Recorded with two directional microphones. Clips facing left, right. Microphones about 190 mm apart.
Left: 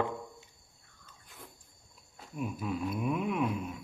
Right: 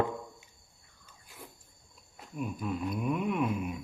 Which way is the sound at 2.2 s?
Centre (ahead or behind).